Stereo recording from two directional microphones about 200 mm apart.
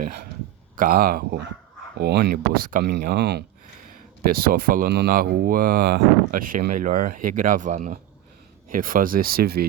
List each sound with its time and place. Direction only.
0.8 s speech: 45° right (ahead or behind)